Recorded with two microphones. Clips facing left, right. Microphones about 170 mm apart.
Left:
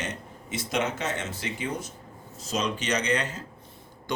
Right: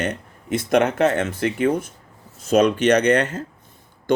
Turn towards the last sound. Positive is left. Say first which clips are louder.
# right 10 dB
turn(degrees=-55)  # may be behind; listen again after turning